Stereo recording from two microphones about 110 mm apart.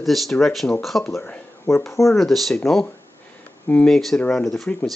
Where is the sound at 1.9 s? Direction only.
25° left (ahead or behind).